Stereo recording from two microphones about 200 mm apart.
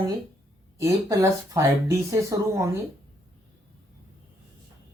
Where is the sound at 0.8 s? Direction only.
15° right (ahead or behind).